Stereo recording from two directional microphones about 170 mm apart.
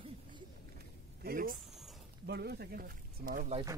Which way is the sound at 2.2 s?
70° right (ahead or behind).